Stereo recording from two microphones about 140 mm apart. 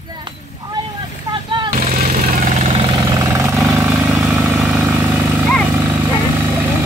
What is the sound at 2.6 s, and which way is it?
Vehicle, 50° right (ahead or behind).